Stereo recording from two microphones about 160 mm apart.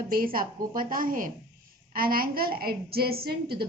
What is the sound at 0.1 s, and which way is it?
A woman's voice, 65° right (ahead or behind).